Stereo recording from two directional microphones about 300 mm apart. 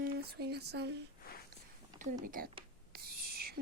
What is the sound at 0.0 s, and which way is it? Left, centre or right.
Speech, right.